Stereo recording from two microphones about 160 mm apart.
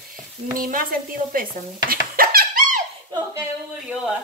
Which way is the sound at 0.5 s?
60° right (ahead or behind).